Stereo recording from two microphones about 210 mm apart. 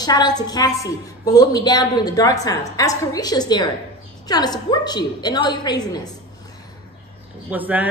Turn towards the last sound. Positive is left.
turn(degrees=-10)  # may be behind; listen again after turning